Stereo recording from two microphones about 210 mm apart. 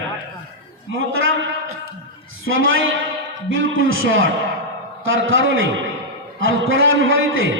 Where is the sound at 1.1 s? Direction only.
75° right (ahead or behind).